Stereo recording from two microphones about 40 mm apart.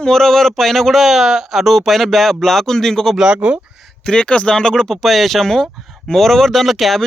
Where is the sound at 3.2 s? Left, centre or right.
Right.